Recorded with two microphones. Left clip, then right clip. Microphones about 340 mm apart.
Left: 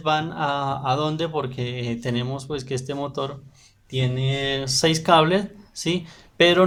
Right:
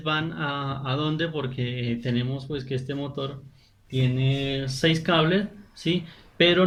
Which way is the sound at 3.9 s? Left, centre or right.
Left.